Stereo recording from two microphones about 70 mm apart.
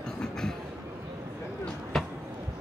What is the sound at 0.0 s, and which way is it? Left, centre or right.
Train, centre.